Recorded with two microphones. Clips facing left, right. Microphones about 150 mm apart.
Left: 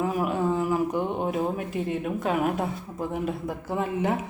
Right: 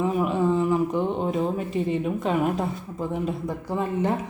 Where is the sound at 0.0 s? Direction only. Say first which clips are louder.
Right 2 dB; 5° left (ahead or behind).